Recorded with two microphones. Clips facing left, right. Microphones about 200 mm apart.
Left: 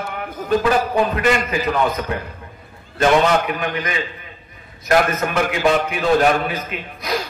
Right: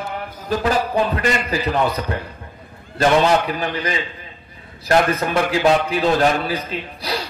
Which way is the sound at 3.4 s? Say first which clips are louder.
Even; 35° right (ahead or behind).